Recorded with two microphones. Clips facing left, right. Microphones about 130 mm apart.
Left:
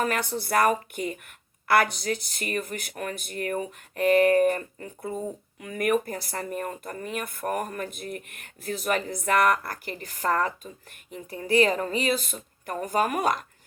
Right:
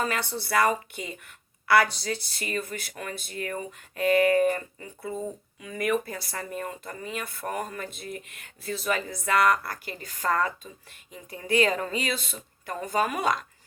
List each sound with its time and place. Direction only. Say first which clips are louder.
0.0 s speech: left 2 dB; 50° left (ahead or behind)